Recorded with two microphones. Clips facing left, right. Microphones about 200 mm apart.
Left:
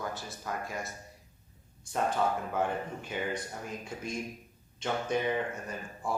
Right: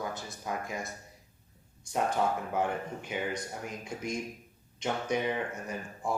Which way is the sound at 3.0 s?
15° right (ahead or behind).